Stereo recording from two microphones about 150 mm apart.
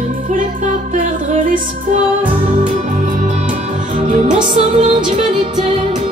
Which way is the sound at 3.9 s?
50° right (ahead or behind).